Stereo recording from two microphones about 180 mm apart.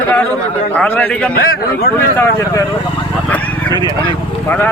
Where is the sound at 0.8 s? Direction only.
10° left (ahead or behind).